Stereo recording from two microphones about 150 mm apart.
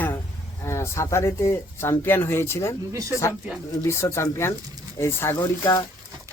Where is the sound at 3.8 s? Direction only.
20° left (ahead or behind).